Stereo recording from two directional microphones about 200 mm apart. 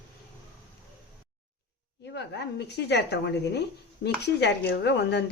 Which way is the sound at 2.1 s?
60° left (ahead or behind).